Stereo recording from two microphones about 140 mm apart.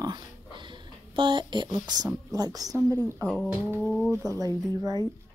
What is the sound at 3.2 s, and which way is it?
Speech, centre (ahead or behind).